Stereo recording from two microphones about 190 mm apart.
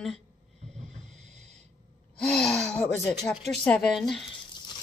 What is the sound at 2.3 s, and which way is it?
Gasp, centre (ahead or behind).